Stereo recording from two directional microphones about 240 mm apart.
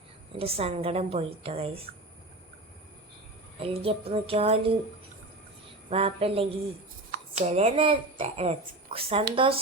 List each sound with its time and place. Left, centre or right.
0.3 s a woman's voice: right
3.6 s a woman's voice: right
5.9 s a woman's voice: right